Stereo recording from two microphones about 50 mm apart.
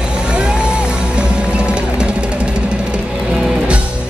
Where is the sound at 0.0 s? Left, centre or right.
Centre.